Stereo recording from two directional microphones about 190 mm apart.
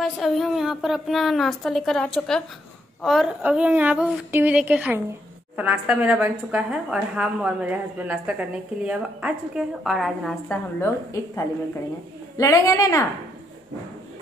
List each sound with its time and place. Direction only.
0.0 s a woman's voice: centre (ahead or behind)
12.4 s a woman's voice: 15° left (ahead or behind)